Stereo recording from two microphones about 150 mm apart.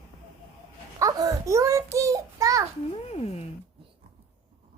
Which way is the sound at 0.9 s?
25° right (ahead or behind).